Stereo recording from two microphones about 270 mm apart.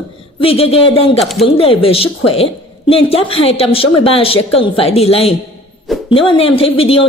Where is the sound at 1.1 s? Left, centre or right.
Centre.